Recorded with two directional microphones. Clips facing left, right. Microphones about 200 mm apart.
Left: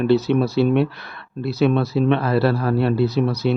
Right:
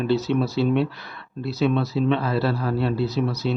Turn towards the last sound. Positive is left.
turn(degrees=60)  # may be behind; listen again after turning